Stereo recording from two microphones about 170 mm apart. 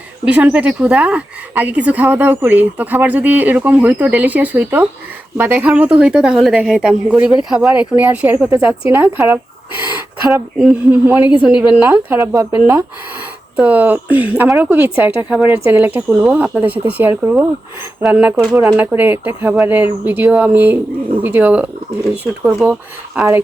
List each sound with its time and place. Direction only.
0.3 s a woman's voice: 5° right (ahead or behind)